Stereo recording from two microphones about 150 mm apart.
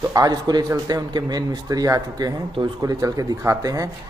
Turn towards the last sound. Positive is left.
turn(degrees=-20)  # may be behind; listen again after turning